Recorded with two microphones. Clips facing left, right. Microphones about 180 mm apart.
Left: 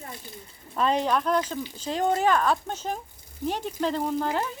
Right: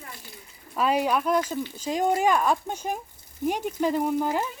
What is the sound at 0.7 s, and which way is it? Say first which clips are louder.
Speech: even; 10° right (ahead or behind).